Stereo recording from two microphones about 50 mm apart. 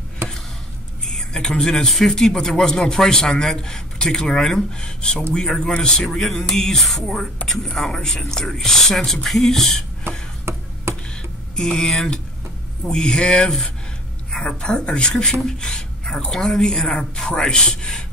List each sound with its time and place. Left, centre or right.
1.0 s speech: centre
6.0 s speech: centre
10.1 s a sound: right
11.5 s speech: centre
14.6 s speech: centre